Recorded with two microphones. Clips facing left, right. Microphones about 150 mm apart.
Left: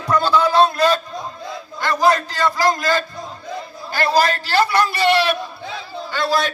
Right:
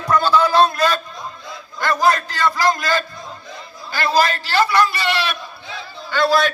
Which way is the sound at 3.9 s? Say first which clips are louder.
Left 1 dB; 50° left (ahead or behind).